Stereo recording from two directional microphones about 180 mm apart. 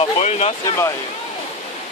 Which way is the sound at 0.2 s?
35° left (ahead or behind).